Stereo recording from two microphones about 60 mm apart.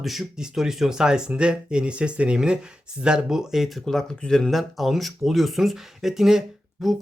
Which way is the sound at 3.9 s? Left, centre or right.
Centre.